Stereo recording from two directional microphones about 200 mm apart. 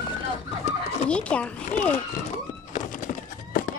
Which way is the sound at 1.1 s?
5° left (ahead or behind).